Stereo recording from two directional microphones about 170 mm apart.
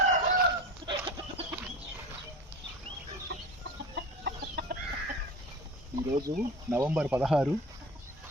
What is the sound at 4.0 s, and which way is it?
Chicken, 75° right (ahead or behind).